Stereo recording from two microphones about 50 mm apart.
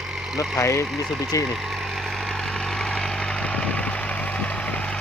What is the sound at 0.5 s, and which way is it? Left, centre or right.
Speech, left.